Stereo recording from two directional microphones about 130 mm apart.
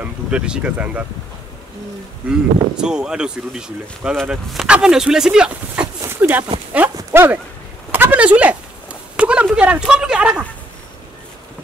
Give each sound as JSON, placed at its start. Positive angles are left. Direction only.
{"t": 0.0, "sound": "speech", "side_deg": -10}
{"t": 2.2, "sound": "speech", "side_deg": -5}
{"t": 5.9, "sound": "a sound", "side_deg": -15}